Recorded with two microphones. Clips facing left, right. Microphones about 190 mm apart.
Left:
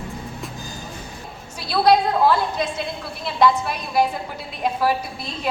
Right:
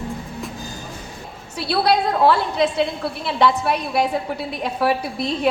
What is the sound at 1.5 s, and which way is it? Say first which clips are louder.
A woman's voice: left 1 dB; 65° right (ahead or behind).